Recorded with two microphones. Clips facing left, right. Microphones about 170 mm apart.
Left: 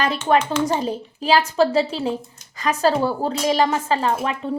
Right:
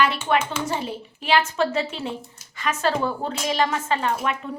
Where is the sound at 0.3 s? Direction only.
40° left (ahead or behind).